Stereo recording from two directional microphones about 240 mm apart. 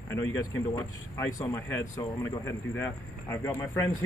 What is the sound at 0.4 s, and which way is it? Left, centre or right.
Speech, centre.